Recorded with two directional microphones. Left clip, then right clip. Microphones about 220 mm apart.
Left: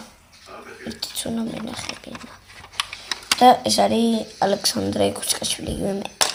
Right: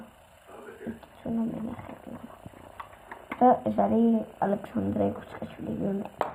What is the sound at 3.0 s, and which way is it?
Speech, 30° left (ahead or behind).